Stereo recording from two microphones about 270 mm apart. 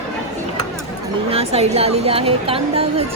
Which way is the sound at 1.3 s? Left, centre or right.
Right.